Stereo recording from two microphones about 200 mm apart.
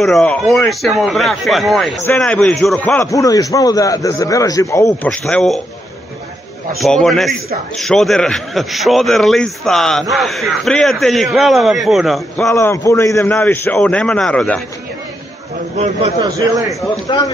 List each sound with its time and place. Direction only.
0.0 s a man's voice: 5° left (ahead or behind)
6.8 s a man's voice: centre (ahead or behind)
12.4 s a man's voice: 15° left (ahead or behind)
15.8 s a man's voice: 30° right (ahead or behind)
16.3 s a man's voice: 15° right (ahead or behind)
17.1 s speech: 25° left (ahead or behind)